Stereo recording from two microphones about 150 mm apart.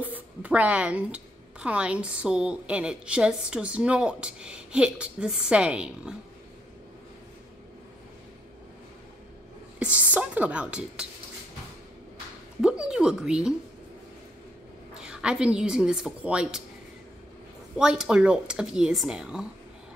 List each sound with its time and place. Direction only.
0.0 s a woman's voice: 10° right (ahead or behind)
9.8 s a woman's voice: 10° right (ahead or behind)
12.6 s speech: 5° right (ahead or behind)
15.0 s a woman's voice: 5° right (ahead or behind)
17.7 s speech: 5° right (ahead or behind)